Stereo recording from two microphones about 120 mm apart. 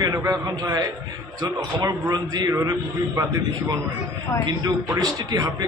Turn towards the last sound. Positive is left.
turn(degrees=-30)  # may be behind; listen again after turning